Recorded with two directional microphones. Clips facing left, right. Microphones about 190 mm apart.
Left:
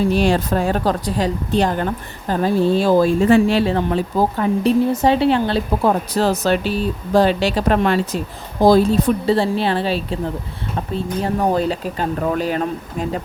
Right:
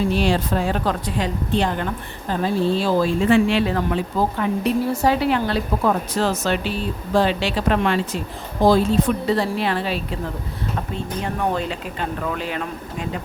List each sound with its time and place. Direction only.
0.1 s a woman's voice: 45° left (ahead or behind)